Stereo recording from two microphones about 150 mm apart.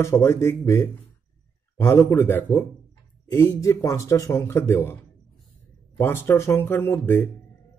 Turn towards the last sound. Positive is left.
turn(degrees=15)  # may be behind; listen again after turning